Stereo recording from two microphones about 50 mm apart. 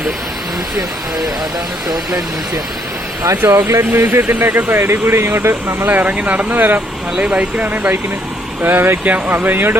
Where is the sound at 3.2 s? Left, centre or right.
Right.